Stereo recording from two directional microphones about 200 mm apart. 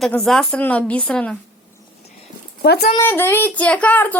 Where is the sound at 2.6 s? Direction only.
55° left (ahead or behind).